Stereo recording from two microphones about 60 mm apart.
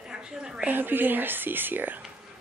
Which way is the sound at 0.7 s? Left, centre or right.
Right.